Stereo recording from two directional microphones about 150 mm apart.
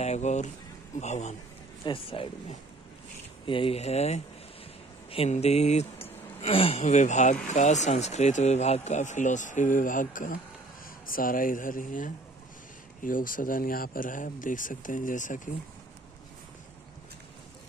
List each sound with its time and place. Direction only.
0.0 s speech: 50° left (ahead or behind)
1.9 s speech: 40° left (ahead or behind)
3.4 s speech: 35° left (ahead or behind); by 15.5 s 60° left (ahead or behind)